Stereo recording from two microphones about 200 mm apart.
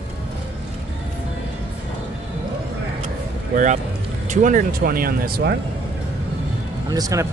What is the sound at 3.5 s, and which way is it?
Speech, 40° right (ahead or behind).